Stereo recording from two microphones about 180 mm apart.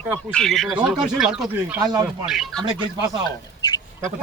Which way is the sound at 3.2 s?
25° left (ahead or behind).